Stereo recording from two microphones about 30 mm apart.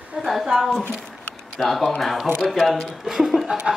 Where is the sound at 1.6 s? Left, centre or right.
Centre.